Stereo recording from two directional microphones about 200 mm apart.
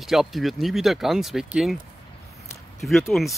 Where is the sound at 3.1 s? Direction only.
Centre (ahead or behind).